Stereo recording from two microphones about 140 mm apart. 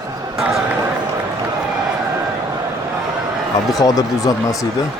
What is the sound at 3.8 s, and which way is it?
Speech, 25° left (ahead or behind).